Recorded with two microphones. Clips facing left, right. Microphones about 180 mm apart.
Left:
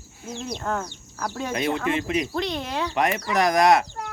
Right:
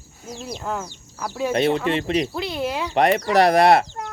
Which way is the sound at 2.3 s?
5° right (ahead or behind).